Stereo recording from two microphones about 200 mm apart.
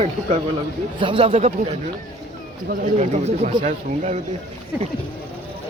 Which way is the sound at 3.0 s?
35° right (ahead or behind).